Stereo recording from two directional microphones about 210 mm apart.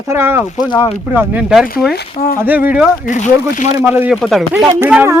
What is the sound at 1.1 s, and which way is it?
A man's voice, centre (ahead or behind).